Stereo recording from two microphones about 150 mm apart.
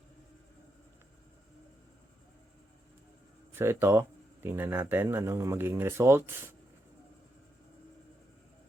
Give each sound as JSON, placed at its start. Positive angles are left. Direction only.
{"t": 3.5, "sound": "speech", "side_deg": -15}